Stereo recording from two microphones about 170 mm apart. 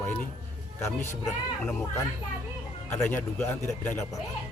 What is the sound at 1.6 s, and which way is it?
A man's voice, 15° left (ahead or behind).